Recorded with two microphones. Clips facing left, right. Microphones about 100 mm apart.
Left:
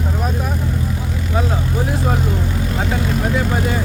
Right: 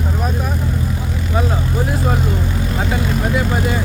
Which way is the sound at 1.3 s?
5° right (ahead or behind).